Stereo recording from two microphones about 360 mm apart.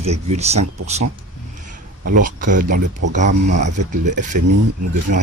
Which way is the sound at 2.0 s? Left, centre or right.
Right.